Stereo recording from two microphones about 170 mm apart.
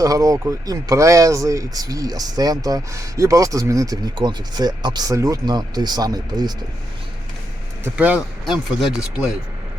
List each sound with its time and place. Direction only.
0.0 s speech: 20° right (ahead or behind)
7.9 s speech: 10° right (ahead or behind)